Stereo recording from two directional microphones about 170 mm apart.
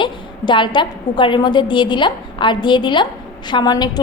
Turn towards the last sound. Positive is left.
turn(degrees=25)  # may be behind; listen again after turning